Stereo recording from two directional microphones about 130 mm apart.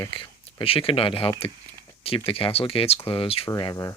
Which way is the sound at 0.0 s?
40° left (ahead or behind).